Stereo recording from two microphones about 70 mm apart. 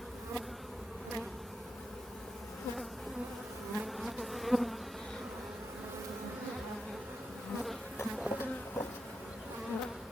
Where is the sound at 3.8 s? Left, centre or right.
Centre.